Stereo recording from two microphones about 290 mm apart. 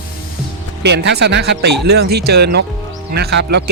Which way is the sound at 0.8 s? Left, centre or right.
Right.